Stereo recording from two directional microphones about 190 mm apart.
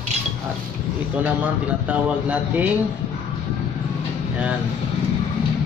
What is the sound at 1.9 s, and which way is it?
Speech, 5° right (ahead or behind).